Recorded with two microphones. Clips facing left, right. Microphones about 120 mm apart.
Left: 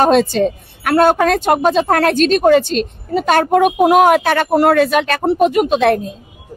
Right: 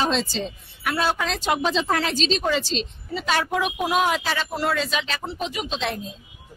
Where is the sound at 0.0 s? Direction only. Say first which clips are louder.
Left 12 dB; 55° left (ahead or behind).